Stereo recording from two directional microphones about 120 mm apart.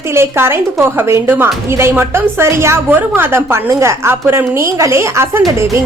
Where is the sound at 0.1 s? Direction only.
20° right (ahead or behind).